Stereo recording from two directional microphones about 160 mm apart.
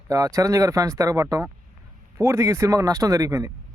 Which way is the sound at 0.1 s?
20° right (ahead or behind).